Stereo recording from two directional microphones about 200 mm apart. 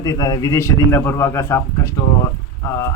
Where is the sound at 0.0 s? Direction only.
20° left (ahead or behind).